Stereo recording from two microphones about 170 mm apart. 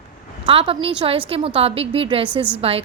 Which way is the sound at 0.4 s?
30° right (ahead or behind).